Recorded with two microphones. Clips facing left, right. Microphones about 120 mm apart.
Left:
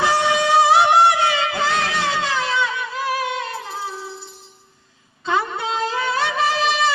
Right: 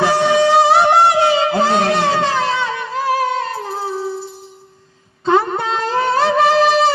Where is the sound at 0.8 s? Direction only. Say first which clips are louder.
Right 3 dB; 30° right (ahead or behind).